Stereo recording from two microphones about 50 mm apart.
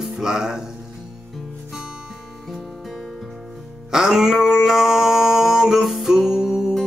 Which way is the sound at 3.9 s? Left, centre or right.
Centre.